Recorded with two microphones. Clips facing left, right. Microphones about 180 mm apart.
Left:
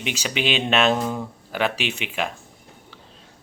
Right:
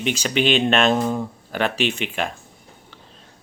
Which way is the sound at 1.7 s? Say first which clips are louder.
Right 5 dB; 50° right (ahead or behind).